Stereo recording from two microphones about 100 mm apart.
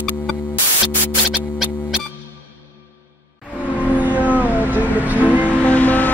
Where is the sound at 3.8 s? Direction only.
15° right (ahead or behind).